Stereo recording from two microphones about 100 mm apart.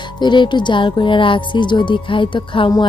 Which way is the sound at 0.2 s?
50° left (ahead or behind).